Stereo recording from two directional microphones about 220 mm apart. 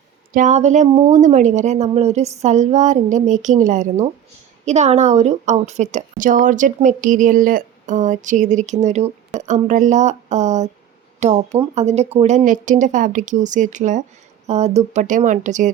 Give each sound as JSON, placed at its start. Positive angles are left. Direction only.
{"t": 0.3, "sound": "a woman's voice", "side_deg": -30}